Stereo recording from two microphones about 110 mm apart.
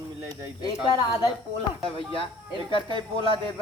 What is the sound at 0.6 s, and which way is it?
Speech, 40° left (ahead or behind).